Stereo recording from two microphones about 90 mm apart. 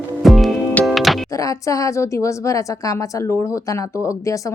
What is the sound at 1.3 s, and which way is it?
A woman's voice, 40° left (ahead or behind).